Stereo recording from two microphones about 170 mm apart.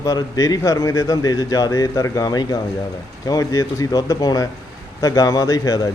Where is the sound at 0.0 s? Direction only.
20° left (ahead or behind).